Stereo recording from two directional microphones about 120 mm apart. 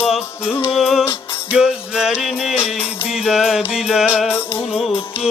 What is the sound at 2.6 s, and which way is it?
Music, 50° left (ahead or behind).